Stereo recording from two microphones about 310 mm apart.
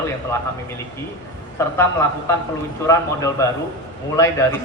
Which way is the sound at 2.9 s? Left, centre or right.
Centre.